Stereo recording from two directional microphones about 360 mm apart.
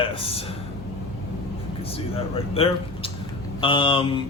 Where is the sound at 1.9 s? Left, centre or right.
Centre.